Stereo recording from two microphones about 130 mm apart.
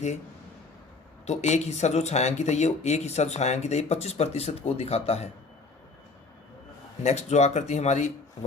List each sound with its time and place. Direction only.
1.3 s speech: 60° left (ahead or behind)
7.0 s speech: 60° left (ahead or behind)